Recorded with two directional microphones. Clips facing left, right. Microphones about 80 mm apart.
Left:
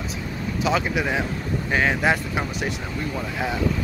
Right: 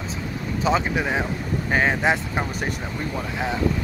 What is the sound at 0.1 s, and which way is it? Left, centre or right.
Vehicle, right.